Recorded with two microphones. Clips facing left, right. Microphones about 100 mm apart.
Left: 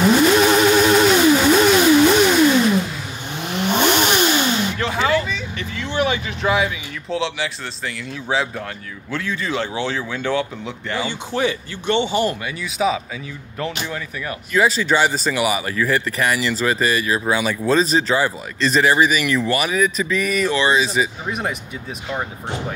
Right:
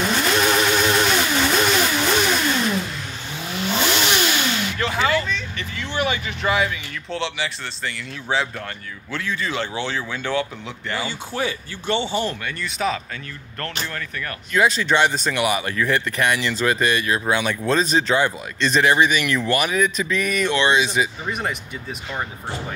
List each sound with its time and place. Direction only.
0.4 s vehicle: 5° left (ahead or behind)
3.8 s vehicle: 45° left (ahead or behind)
4.2 s a sound: 20° left (ahead or behind)
4.7 s vehicle: centre (ahead or behind)
9.1 s speech: centre (ahead or behind)
11.4 s speech: 20° left (ahead or behind)
12.2 s speech: 5° left (ahead or behind)